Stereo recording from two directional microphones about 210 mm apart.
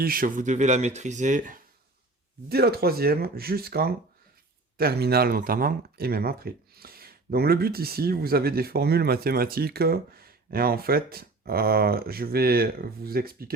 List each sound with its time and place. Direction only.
0.0 s speech: 45° right (ahead or behind)
2.5 s speech: 50° right (ahead or behind)